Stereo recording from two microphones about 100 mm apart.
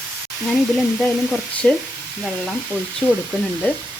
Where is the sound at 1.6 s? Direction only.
10° left (ahead or behind).